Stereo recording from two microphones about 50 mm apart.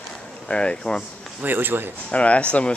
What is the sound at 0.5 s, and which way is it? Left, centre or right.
Speech, centre.